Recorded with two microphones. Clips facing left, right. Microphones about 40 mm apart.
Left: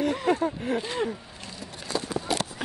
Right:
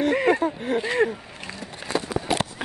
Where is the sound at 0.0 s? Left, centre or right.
Right.